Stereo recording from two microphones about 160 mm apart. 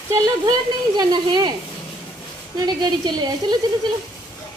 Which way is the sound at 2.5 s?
25° right (ahead or behind).